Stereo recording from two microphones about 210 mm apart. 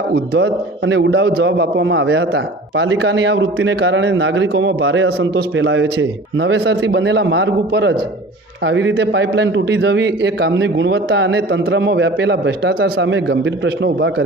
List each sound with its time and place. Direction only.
0.1 s a man's voice: 55° right (ahead or behind)